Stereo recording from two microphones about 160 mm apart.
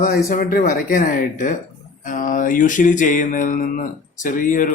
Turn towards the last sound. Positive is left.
turn(degrees=55)  # may be behind; listen again after turning